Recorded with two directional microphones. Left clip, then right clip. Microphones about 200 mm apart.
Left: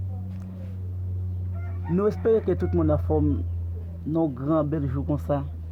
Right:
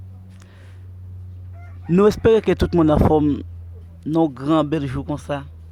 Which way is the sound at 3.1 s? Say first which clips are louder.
Right 7 dB; 35° right (ahead or behind).